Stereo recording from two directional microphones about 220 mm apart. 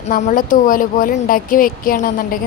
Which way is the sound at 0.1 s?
35° left (ahead or behind).